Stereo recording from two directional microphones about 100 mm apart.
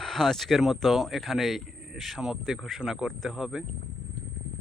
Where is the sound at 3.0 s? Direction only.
Centre (ahead or behind).